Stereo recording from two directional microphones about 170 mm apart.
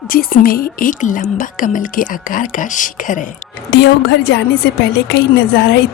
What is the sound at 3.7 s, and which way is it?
Speech, 90° left.